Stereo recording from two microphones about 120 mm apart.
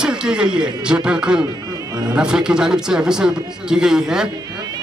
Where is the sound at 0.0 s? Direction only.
5° right (ahead or behind).